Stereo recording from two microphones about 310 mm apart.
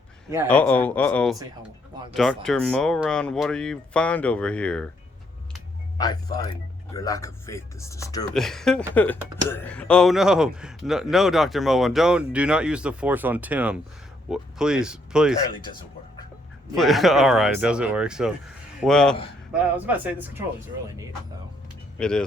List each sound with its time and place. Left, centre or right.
0.4 s speech: centre
6.0 s a man's voice: centre
15.6 s music: centre
16.7 s speech: centre
21.9 s speech: centre